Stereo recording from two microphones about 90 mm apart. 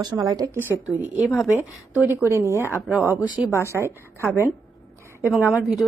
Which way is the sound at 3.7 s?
30° right (ahead or behind).